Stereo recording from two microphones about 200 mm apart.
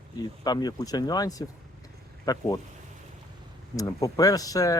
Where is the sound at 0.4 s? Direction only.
20° left (ahead or behind).